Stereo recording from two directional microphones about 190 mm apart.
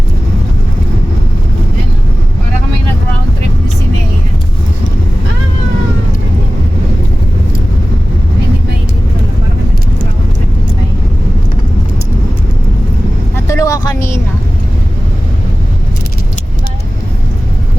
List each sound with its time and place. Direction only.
13.3 s vehicle: 15° left (ahead or behind)